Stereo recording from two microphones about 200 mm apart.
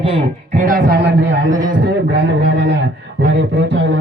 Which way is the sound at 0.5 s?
40° right (ahead or behind).